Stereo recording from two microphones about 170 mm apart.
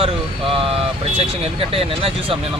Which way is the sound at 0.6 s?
35° right (ahead or behind).